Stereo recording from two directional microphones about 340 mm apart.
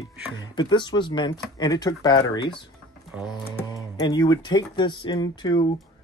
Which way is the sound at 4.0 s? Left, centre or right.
Centre.